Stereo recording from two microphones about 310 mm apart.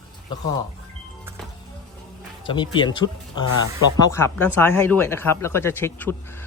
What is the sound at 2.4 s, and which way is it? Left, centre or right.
Speech, centre.